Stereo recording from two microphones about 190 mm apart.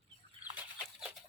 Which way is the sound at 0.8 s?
5° right (ahead or behind).